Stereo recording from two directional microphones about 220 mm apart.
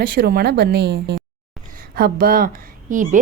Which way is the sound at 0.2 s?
45° right (ahead or behind).